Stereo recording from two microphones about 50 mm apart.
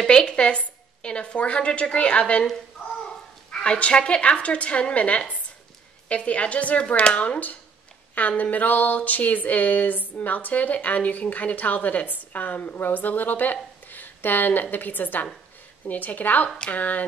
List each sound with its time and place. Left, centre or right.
0.0 s a woman's voice: centre
3.5 s a woman's voice: centre